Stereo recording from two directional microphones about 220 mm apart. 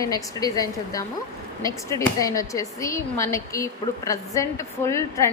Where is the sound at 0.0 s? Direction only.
15° left (ahead or behind).